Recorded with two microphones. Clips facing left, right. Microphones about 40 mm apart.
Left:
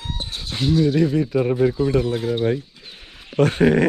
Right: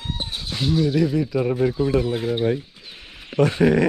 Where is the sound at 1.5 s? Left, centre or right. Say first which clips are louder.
Left 3 dB; centre.